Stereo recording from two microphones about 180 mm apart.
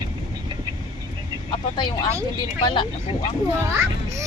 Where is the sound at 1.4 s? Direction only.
25° left (ahead or behind).